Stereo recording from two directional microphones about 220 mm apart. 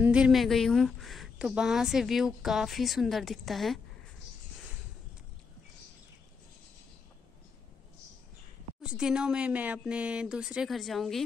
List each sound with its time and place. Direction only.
0.0 s a woman's voice: 5° right (ahead or behind)
8.8 s a woman's voice: 5° right (ahead or behind)